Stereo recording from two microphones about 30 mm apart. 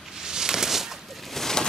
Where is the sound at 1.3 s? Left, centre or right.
Centre.